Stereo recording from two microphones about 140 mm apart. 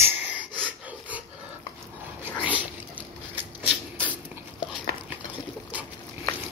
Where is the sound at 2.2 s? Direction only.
10° right (ahead or behind).